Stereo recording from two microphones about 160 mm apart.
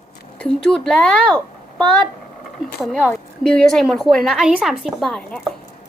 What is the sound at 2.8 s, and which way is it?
A woman's voice, centre (ahead or behind).